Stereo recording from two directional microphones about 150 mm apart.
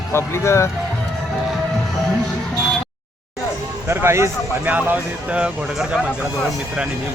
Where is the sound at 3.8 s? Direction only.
15° right (ahead or behind).